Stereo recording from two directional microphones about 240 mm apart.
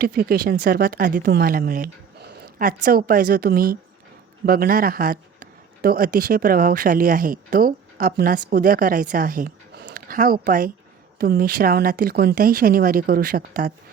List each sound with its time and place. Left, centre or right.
0.0 s a woman's voice: right